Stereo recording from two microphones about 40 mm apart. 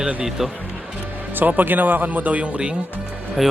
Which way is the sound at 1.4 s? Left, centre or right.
Right.